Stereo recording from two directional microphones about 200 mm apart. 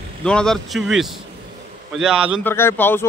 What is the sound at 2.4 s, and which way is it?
Speech, 10° left (ahead or behind).